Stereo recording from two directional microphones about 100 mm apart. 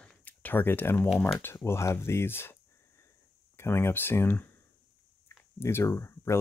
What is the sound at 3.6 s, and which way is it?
Speech, 25° left (ahead or behind).